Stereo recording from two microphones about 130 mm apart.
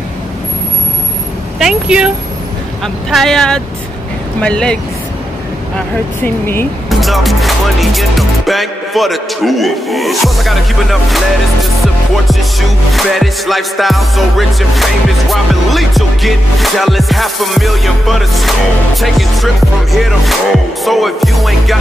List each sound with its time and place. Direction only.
1.6 s music: 5° right (ahead or behind)
4.4 s speech: 5° left (ahead or behind)
6.2 s speech: 15° left (ahead or behind)
6.9 s speech: centre (ahead or behind)
11.8 s music: centre (ahead or behind)